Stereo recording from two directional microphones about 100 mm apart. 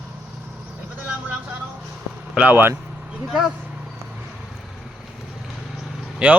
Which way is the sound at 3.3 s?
5° right (ahead or behind).